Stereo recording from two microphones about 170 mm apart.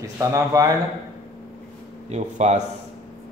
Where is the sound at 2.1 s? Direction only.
40° right (ahead or behind).